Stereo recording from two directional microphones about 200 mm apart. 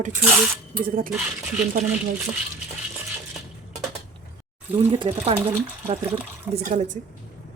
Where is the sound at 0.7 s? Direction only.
45° right (ahead or behind).